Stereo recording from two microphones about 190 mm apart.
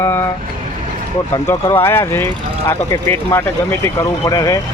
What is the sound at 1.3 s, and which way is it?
Speech, 15° left (ahead or behind).